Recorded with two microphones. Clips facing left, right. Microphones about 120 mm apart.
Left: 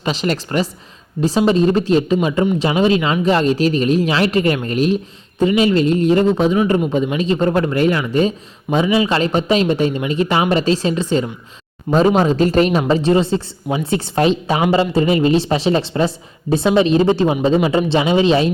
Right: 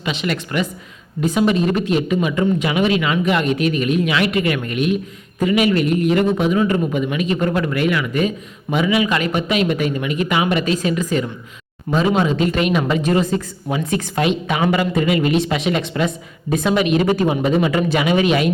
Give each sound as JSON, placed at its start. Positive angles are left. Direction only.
{"t": 0.0, "sound": "a woman's voice", "side_deg": 35}